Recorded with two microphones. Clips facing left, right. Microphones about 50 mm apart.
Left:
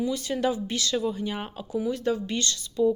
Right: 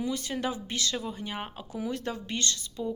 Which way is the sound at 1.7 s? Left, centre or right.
Right.